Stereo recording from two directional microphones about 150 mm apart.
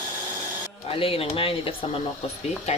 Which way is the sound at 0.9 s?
40° left (ahead or behind).